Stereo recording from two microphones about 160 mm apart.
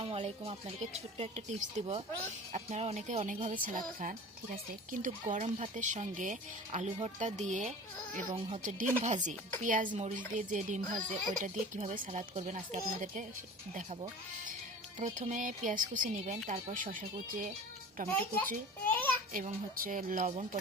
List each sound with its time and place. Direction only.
0.0 s speech: 35° right (ahead or behind)
9.0 s speech: 50° right (ahead or behind)
14.9 s speech: 50° right (ahead or behind)
18.1 s a child's voice: 10° left (ahead or behind)
19.8 s speech: 60° right (ahead or behind)